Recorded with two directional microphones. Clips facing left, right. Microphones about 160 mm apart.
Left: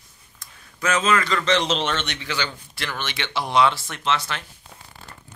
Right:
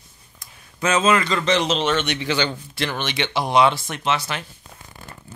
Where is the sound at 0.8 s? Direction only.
25° right (ahead or behind).